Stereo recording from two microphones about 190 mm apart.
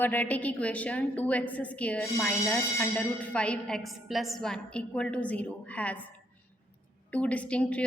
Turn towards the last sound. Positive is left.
turn(degrees=5)  # may be behind; listen again after turning